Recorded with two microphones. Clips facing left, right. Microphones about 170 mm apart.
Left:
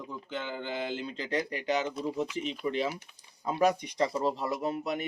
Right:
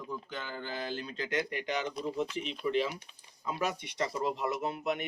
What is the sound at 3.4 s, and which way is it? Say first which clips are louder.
Speech: left 7 dB; 45° left (ahead or behind).